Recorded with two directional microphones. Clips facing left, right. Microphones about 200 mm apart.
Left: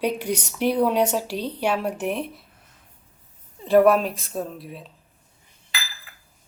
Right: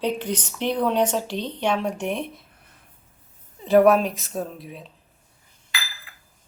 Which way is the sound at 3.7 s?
Centre (ahead or behind).